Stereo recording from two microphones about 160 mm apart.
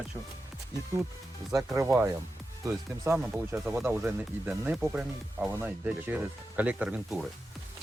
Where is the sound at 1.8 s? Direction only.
15° right (ahead or behind).